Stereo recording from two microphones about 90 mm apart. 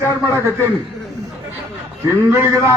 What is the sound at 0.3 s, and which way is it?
Speech, 30° right (ahead or behind).